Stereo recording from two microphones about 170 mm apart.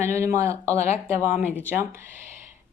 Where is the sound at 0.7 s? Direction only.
40° left (ahead or behind).